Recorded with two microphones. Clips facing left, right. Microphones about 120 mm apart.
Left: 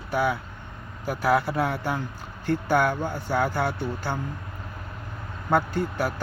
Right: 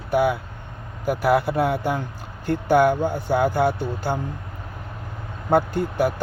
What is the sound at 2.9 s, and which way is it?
Speech, 15° right (ahead or behind).